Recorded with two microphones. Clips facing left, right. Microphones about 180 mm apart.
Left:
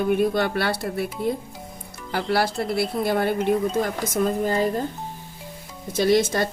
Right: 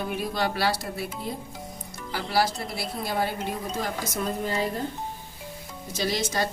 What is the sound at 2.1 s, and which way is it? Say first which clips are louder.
Speech: left 3 dB; 60° left (ahead or behind).